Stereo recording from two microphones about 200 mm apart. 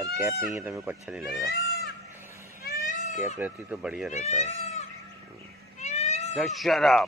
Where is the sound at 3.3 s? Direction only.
5° right (ahead or behind).